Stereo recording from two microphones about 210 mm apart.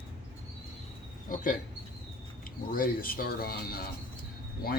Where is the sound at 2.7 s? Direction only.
45° left (ahead or behind).